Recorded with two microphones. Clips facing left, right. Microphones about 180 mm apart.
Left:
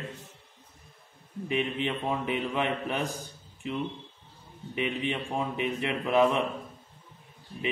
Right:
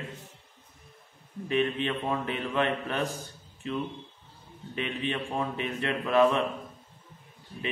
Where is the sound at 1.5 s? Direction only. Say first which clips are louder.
Right 2 dB; 15° left (ahead or behind).